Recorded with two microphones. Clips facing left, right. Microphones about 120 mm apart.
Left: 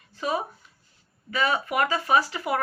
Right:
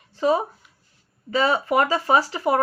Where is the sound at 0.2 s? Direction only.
25° right (ahead or behind).